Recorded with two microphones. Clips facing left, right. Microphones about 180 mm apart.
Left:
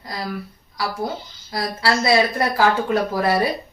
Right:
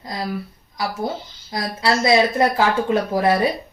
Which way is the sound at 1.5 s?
20° right (ahead or behind).